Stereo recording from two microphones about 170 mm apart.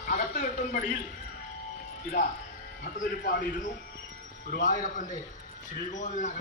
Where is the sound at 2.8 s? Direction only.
50° left (ahead or behind).